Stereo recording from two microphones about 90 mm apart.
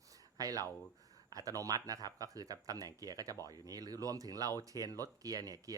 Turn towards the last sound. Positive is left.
turn(degrees=-45)  # may be behind; listen again after turning